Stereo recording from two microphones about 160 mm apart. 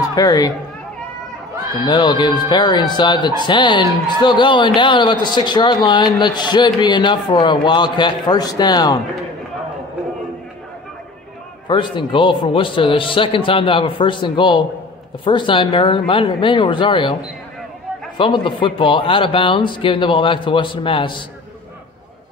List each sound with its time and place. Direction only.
0.1 s speech: 20° left (ahead or behind)
1.9 s speech: 25° left (ahead or behind)
11.6 s speech: 30° left (ahead or behind)